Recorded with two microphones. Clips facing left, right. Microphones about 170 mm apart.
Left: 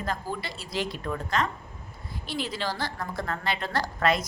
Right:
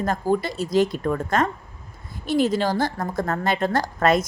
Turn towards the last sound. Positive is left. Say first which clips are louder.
# right 6 dB
turn(degrees=-45)  # may be behind; listen again after turning